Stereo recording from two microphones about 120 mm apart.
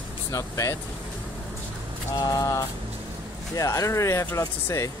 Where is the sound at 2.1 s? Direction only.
30° left (ahead or behind).